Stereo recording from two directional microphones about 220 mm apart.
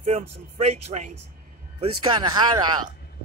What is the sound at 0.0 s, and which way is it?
Speech, 30° right (ahead or behind).